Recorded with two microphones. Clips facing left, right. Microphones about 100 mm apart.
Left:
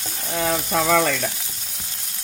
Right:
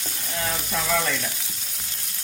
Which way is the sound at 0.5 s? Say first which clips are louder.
Left 7 dB; 65° left (ahead or behind).